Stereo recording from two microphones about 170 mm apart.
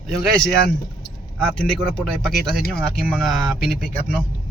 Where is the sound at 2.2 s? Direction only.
Centre (ahead or behind).